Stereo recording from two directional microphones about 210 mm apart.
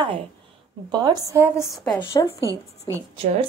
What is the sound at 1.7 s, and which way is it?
Speech, 5° left (ahead or behind).